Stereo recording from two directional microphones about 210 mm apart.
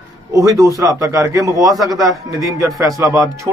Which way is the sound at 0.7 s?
15° right (ahead or behind).